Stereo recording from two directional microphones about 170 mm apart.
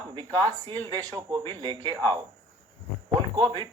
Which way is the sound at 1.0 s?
20° right (ahead or behind).